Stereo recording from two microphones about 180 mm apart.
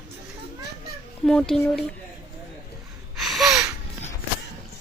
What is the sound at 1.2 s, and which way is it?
Speech, 5° left (ahead or behind).